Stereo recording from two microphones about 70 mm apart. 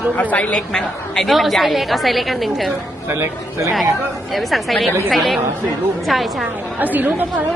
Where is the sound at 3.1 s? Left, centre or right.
Right.